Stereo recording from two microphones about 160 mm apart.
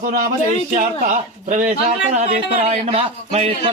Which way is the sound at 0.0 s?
60° right (ahead or behind).